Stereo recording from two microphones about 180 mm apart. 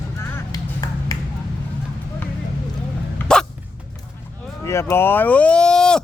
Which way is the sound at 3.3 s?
5° left (ahead or behind).